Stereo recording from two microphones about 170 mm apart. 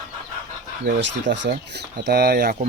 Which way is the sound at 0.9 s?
80° right.